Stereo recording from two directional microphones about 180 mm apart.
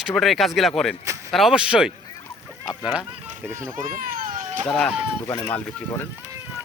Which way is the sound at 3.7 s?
50° right (ahead or behind).